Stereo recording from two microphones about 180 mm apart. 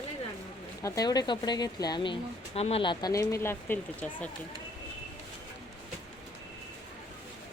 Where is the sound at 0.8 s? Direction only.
20° left (ahead or behind).